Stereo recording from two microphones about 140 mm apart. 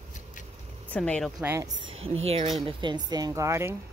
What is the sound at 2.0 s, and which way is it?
Speech, 45° right (ahead or behind).